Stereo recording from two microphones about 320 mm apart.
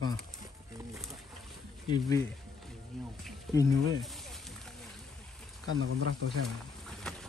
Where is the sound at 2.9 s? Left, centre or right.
Centre.